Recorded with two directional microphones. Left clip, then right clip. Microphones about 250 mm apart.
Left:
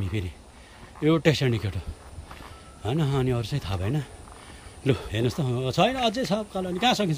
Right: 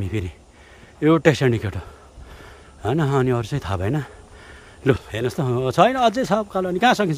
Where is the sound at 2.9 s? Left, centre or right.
Centre.